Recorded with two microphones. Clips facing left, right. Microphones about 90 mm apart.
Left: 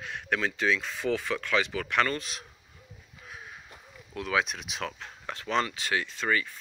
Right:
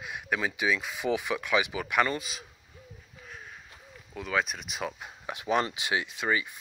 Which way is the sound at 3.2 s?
5° left (ahead or behind).